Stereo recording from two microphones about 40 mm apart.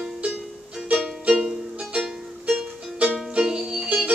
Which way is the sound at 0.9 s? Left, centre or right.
Right.